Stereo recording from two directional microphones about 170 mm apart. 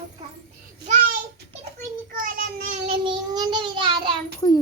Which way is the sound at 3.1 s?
25° right (ahead or behind).